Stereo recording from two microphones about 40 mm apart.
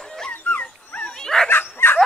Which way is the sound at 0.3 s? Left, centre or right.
Left.